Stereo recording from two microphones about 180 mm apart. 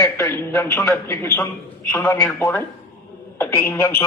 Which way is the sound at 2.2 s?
20° left (ahead or behind).